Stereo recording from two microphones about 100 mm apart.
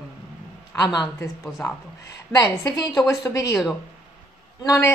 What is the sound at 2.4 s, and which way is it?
A woman's voice, 40° left (ahead or behind).